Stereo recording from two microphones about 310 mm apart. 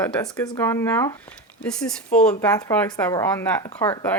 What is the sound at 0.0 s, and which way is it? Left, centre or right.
Speech, centre.